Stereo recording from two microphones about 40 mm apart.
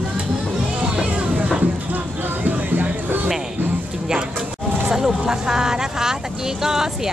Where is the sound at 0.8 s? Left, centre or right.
Right.